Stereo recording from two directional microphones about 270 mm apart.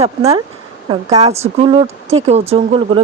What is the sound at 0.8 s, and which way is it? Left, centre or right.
Speech, right.